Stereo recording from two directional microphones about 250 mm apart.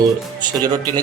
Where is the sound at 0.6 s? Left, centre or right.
Centre.